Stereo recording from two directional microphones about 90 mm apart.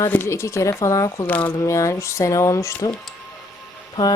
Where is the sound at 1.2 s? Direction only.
15° left (ahead or behind).